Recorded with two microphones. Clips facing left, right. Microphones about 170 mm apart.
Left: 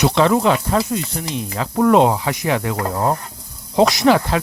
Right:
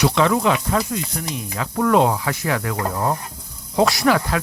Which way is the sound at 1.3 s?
30° left (ahead or behind).